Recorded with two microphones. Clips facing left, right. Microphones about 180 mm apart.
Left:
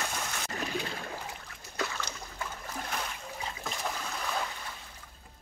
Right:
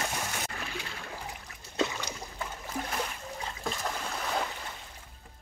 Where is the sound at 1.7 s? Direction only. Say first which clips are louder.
Right 5 dB; 20° right (ahead or behind).